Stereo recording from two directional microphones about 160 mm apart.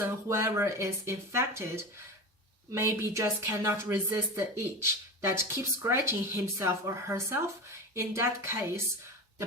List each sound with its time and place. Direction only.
0.0 s speech: 15° right (ahead or behind)